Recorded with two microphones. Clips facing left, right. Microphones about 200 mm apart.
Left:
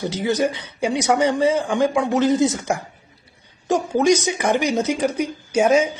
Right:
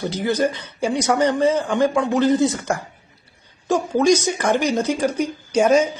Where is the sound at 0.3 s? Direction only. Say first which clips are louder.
Even; 10° left (ahead or behind).